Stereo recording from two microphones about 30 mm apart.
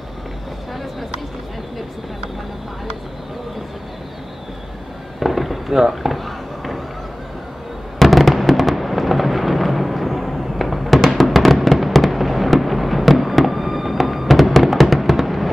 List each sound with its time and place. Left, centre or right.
5.2 s fireworks: centre
6.1 s a sound: centre
8.0 s fireworks: centre
11.0 s music: centre
11.2 s fireworks: centre